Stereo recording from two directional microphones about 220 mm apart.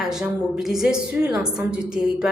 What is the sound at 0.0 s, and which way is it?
A woman's voice, centre (ahead or behind).